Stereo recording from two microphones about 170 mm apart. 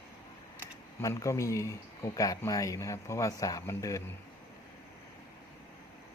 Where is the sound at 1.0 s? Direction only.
20° left (ahead or behind).